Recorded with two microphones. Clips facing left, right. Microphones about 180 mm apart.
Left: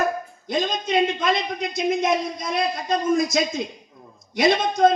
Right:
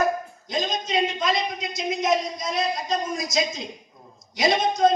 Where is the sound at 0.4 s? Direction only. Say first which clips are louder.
Left 4 dB; 55° left (ahead or behind).